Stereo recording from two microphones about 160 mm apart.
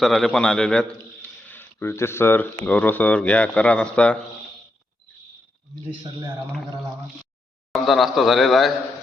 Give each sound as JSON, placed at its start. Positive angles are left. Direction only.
{"t": 0.0, "sound": "a man's voice", "side_deg": 0}
{"t": 5.9, "sound": "speech", "side_deg": -30}
{"t": 7.7, "sound": "a man's voice", "side_deg": 0}